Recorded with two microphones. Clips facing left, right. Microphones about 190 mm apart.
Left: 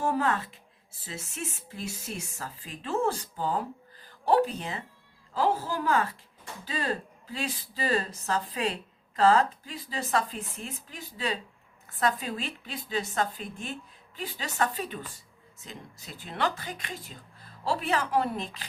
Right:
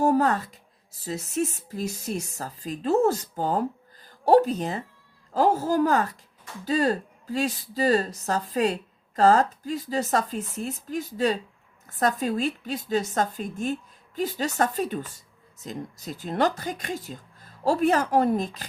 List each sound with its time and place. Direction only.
0.0 s speech: 40° right (ahead or behind)